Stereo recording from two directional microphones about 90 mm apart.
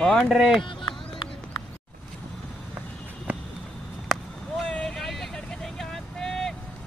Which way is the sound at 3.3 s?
15° right (ahead or behind).